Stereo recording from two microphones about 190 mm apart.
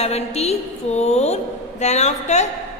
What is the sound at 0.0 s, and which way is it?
A woman's voice, 35° left (ahead or behind).